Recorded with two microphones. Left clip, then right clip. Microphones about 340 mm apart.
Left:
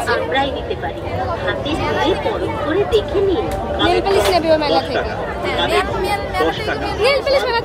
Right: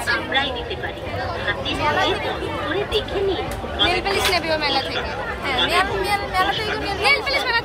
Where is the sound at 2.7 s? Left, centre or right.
Left.